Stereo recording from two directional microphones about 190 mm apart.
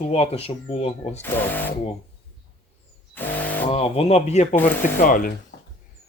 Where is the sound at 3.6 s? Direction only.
30° left (ahead or behind).